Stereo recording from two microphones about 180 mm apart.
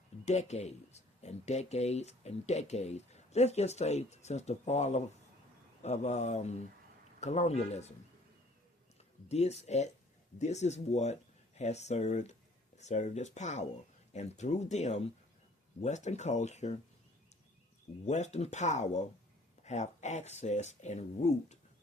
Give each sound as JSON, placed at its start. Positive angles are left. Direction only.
{"t": 0.3, "sound": "speech", "side_deg": 40}
{"t": 9.3, "sound": "speech", "side_deg": 35}
{"t": 18.0, "sound": "speech", "side_deg": 40}